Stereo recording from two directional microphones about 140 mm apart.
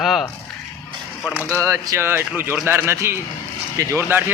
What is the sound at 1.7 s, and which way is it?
A man's voice, 20° right (ahead or behind).